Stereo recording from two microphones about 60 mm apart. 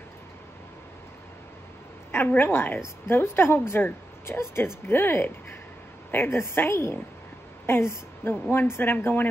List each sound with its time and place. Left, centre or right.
2.1 s a woman's voice: left